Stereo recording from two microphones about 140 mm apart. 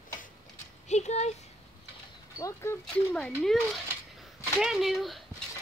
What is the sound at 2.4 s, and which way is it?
Speech, 20° left (ahead or behind).